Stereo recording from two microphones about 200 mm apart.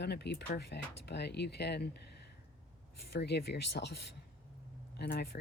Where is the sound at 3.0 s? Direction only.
55° left (ahead or behind).